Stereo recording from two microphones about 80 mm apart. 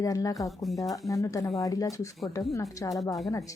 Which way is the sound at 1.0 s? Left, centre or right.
Left.